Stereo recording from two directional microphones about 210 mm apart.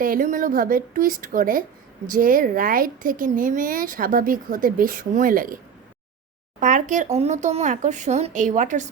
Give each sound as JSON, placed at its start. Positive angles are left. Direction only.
{"t": 0.0, "sound": "speech", "side_deg": -40}
{"t": 6.6, "sound": "speech", "side_deg": -35}